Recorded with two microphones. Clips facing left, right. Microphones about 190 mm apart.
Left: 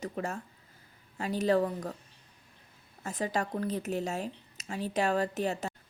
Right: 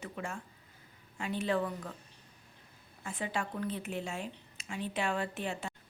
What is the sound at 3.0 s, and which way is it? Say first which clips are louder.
Speech: left 5 dB; 40° left (ahead or behind).